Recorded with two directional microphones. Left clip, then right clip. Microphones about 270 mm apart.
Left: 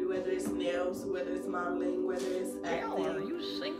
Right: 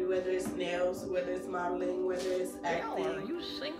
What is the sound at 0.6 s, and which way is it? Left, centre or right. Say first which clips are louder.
Music: even; centre.